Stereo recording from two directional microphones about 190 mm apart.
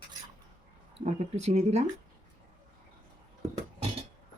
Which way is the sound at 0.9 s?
35° right (ahead or behind).